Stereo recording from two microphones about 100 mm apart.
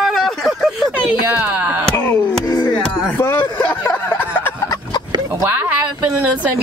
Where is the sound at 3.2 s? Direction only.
25° left (ahead or behind).